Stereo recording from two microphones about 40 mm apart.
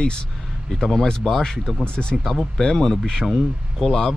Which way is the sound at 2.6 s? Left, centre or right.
Centre.